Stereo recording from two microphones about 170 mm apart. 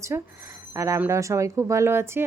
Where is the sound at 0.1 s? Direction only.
15° right (ahead or behind).